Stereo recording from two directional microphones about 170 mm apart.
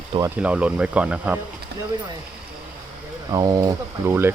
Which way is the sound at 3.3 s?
20° right (ahead or behind).